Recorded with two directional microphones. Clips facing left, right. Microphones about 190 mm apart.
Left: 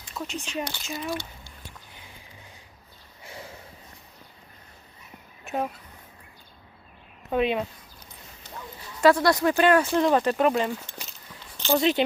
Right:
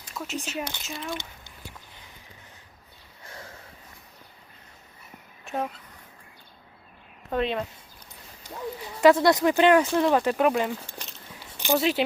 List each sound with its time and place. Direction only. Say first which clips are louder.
0.2 s speech: left 2 dB; 10° left (ahead or behind)
0.5 s speech: left 2 dB; 10° right (ahead or behind)
3.2 s sniff: left 2 dB; 10° left (ahead or behind)
5.5 s speech: left 1 dB; 5° left (ahead or behind)
7.3 s speech: left 2 dB; 5° left (ahead or behind)
8.4 s dog: right 2 dB; 10° right (ahead or behind)
9.0 s speech: right 1 dB; 20° right (ahead or behind)
9.8 s speech: even; centre (ahead or behind)